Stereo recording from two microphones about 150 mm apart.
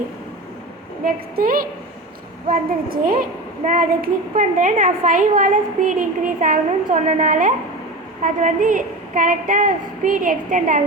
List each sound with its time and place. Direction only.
1.0 s a woman's voice: 75° right (ahead or behind); by 10.8 s 60° right (ahead or behind)